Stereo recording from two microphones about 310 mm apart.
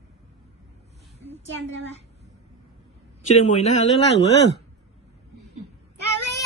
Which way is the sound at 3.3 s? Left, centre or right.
Left.